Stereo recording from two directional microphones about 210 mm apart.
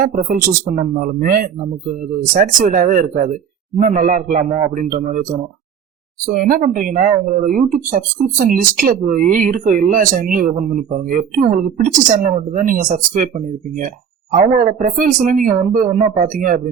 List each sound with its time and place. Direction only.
0.0 s speech: 40° right (ahead or behind)
6.2 s speech: 40° right (ahead or behind)
14.3 s speech: 40° right (ahead or behind)